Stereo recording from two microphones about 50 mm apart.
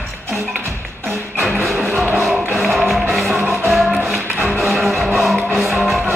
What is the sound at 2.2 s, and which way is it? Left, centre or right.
Music, centre.